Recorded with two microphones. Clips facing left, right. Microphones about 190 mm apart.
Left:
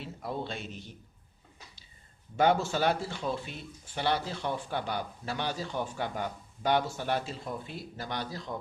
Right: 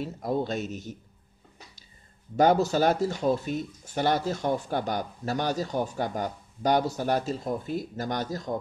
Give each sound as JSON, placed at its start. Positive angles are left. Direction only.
{"t": 0.0, "sound": "speech", "side_deg": -45}
{"t": 2.3, "sound": "speech", "side_deg": -40}